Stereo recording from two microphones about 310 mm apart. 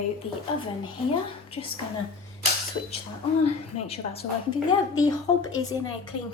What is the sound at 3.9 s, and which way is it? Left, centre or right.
A woman's voice, centre.